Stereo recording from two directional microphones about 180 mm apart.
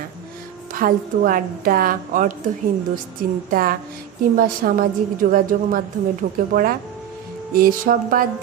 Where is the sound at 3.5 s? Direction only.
55° right (ahead or behind).